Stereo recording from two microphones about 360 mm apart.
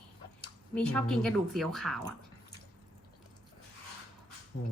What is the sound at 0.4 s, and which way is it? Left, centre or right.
Speech, centre.